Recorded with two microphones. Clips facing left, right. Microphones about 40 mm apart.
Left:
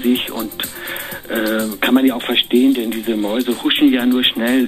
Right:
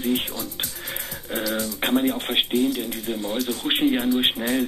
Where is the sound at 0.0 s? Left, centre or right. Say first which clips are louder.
Left 8 dB; left.